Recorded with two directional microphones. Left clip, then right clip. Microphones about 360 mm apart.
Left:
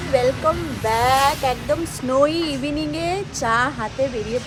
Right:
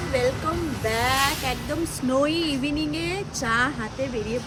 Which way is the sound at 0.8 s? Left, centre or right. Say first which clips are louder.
Left 6 dB; centre.